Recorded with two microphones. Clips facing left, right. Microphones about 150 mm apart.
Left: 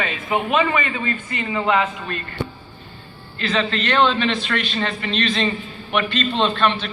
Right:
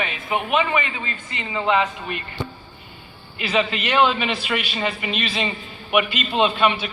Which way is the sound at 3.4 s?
10° right (ahead or behind).